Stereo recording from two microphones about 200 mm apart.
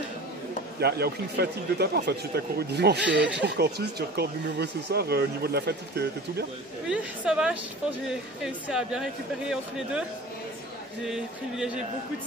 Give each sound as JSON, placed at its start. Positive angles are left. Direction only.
{"t": 0.7, "sound": "speech", "side_deg": -55}
{"t": 6.9, "sound": "speech", "side_deg": -5}
{"t": 11.1, "sound": "speech", "side_deg": -5}